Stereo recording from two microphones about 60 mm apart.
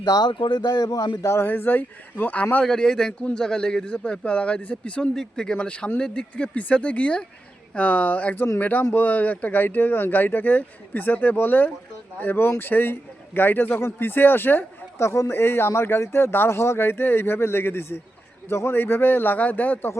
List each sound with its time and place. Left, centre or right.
0.0 s a man's voice: left
1.5 s speech: left
2.6 s a man's voice: centre; by 14.6 s left
14.9 s speech: left